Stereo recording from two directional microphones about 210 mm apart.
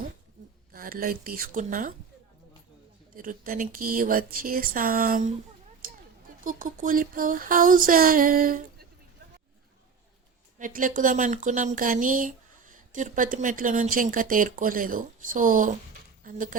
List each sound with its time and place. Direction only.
0.7 s speech: 45° right (ahead or behind)
3.2 s speech: 40° right (ahead or behind)
5.8 s a sound: 40° right (ahead or behind)
6.4 s speech: 40° right (ahead or behind)
10.6 s speech: 40° right (ahead or behind)